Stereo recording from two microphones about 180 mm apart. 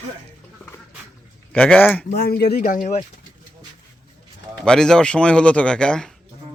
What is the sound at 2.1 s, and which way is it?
Speech, 60° left (ahead or behind).